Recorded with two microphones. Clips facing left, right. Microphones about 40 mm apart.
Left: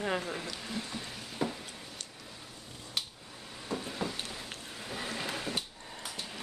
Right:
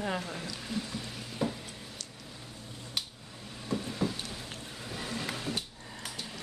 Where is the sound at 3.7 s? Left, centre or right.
Centre.